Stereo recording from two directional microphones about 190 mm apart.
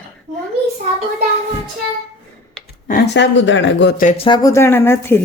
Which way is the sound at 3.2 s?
75° left (ahead or behind).